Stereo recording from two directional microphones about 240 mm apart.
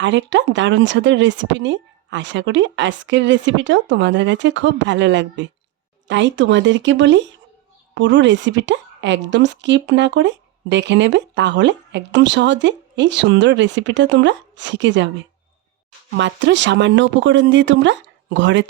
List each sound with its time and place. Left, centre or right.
0.0 s a woman's voice: right
16.1 s a woman's voice: right